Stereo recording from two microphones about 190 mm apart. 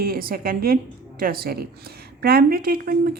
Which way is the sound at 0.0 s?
50° right (ahead or behind).